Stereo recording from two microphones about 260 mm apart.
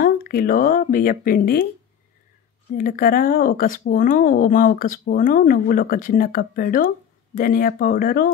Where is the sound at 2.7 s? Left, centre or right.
Left.